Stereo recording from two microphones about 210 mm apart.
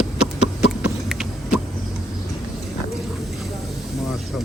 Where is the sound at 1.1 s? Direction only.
Centre (ahead or behind).